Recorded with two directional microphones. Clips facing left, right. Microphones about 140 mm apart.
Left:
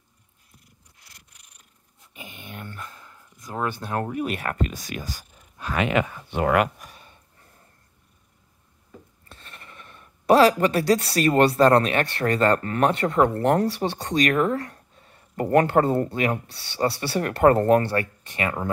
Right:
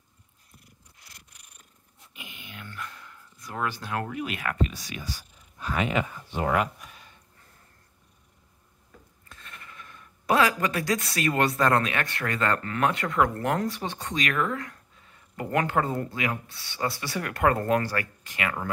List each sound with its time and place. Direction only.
2.1 s dog: 45° left (ahead or behind)
3.3 s a sound: 20° left (ahead or behind)
3.9 s speech: 35° left (ahead or behind)
4.6 s speech: 50° left (ahead or behind)
5.6 s speech: 75° left (ahead or behind)
9.3 s speech: 30° left (ahead or behind)